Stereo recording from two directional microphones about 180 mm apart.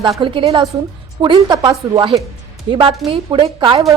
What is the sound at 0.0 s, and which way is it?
A woman's voice, 25° right (ahead or behind).